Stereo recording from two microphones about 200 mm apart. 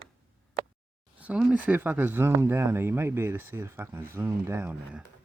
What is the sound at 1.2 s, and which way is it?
Speech, 5° right (ahead or behind).